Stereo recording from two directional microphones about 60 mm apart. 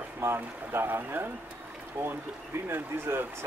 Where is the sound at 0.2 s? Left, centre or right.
Right.